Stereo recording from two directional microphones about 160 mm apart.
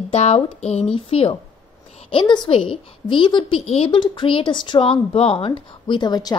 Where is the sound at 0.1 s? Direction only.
40° left (ahead or behind).